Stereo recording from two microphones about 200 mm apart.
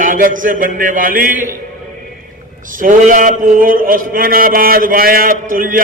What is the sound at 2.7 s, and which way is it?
A man's voice, 40° right (ahead or behind).